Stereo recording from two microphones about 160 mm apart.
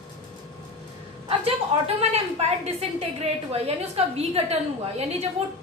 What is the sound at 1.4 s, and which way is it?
A woman's voice, 40° right (ahead or behind).